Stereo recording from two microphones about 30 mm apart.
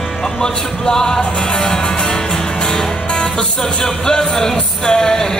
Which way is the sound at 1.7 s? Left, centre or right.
Left.